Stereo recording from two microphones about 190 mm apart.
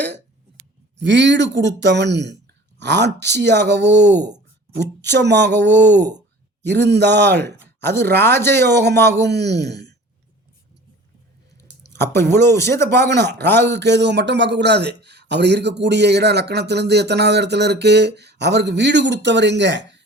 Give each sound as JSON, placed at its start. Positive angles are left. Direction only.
{"t": 0.0, "sound": "speech", "side_deg": -65}
{"t": 4.2, "sound": "a sound", "side_deg": -20}
{"t": 4.8, "sound": "speech", "side_deg": -65}
{"t": 7.9, "sound": "speech", "side_deg": 10}
{"t": 8.6, "sound": "speech", "side_deg": -60}
{"t": 11.8, "sound": "speech", "side_deg": 15}
{"t": 13.1, "sound": "speech", "side_deg": -60}
{"t": 13.4, "sound": "speech", "side_deg": 10}
{"t": 13.7, "sound": "speech", "side_deg": -65}